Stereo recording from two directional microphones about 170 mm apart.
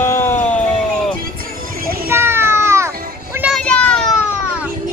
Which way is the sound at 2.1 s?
15° right (ahead or behind).